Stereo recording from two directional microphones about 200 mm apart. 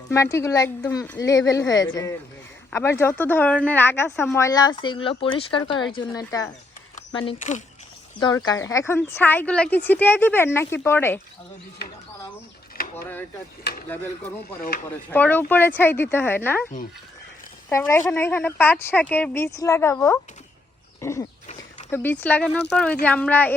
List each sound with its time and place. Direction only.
0.1 s speech: 15° left (ahead or behind)
8.4 s speech: 15° left (ahead or behind)
12.7 s a sound: 50° left (ahead or behind)
13.7 s speech: 55° left (ahead or behind)
15.1 s speech: 10° left (ahead or behind)
17.7 s speech: 15° left (ahead or behind)